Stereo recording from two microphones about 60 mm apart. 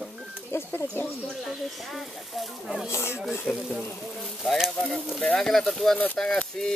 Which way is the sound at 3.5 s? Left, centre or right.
Centre.